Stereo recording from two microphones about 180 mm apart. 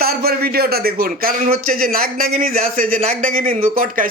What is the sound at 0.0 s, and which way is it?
A man's voice, 55° right (ahead or behind).